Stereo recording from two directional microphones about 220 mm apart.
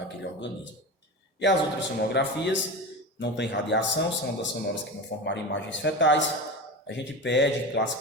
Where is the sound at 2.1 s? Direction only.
50° left (ahead or behind).